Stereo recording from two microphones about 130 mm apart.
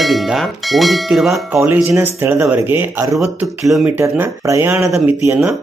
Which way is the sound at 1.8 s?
20° right (ahead or behind).